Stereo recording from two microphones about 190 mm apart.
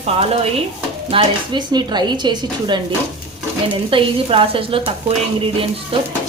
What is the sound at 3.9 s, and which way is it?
Speech, 30° right (ahead or behind).